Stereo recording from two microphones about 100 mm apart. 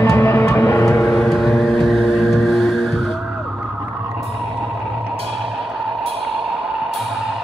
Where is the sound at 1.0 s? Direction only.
5° left (ahead or behind).